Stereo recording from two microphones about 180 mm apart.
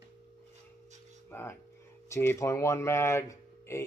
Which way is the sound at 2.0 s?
15° left (ahead or behind).